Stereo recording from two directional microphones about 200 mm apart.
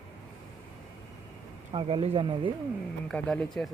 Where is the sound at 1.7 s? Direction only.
25° right (ahead or behind).